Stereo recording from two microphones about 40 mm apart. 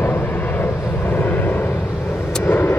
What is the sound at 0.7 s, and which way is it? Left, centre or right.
Vehicle, left.